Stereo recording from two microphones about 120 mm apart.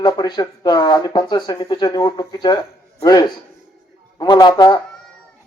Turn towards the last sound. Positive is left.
turn(degrees=35)  # may be behind; listen again after turning